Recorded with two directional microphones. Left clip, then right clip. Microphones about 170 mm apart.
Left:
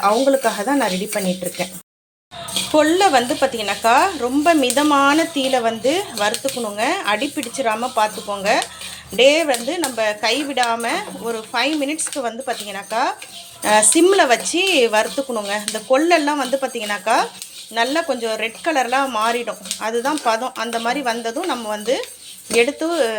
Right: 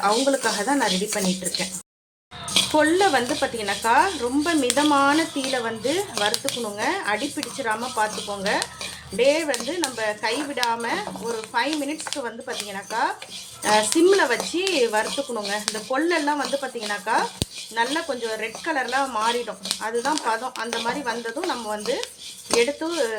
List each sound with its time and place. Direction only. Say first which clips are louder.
0.0 s speech: left 5 dB; 15° left (ahead or behind)
2.7 s speech: left 6 dB; 10° left (ahead or behind)